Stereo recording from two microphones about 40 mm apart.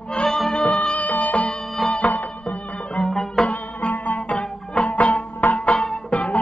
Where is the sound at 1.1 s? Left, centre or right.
Left.